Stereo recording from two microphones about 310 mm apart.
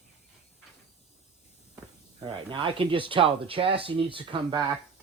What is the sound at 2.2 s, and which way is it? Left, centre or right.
Speech, centre.